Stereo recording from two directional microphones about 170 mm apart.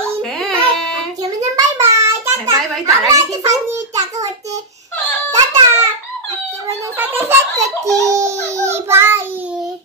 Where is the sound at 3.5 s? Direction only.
40° right (ahead or behind).